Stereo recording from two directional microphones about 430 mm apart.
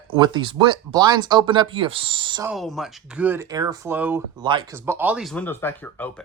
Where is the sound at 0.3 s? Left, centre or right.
Centre.